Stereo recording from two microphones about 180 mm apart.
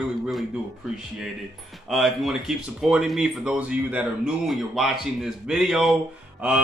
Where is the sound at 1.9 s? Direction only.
Centre (ahead or behind).